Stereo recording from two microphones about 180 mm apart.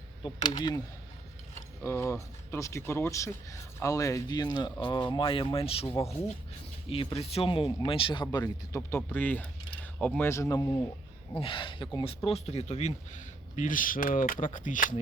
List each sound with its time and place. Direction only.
0.2 s speech: 25° left (ahead or behind)
11.3 s speech: 30° left (ahead or behind); by 14.9 s 45° left (ahead or behind)